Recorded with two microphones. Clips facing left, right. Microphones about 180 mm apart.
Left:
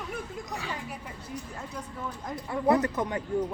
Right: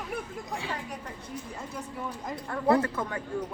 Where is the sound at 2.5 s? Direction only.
20° left (ahead or behind).